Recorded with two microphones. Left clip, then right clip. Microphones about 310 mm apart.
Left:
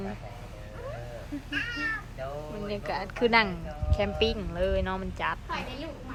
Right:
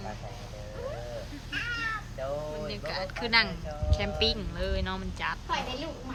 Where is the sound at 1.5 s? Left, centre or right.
Right.